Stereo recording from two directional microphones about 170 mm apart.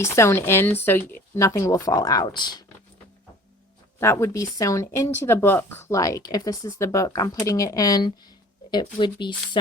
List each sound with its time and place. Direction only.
0.0 s speech: 15° left (ahead or behind)
4.0 s speech: 15° left (ahead or behind)